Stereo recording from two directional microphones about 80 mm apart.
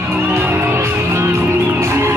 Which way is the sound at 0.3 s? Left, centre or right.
Right.